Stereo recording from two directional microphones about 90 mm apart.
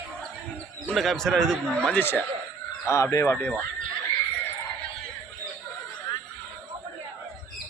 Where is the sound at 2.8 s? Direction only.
35° left (ahead or behind).